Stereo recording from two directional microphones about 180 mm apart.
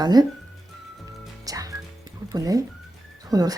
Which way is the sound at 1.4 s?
20° right (ahead or behind).